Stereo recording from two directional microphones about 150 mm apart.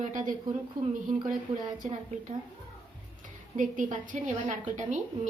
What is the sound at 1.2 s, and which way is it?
Speech, 30° right (ahead or behind).